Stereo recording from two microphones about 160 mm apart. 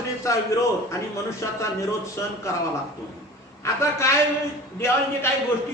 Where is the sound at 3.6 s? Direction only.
15° left (ahead or behind).